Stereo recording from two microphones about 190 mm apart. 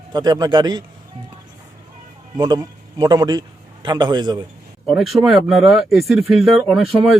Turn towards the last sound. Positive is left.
turn(degrees=0)  # may be behind; listen again after turning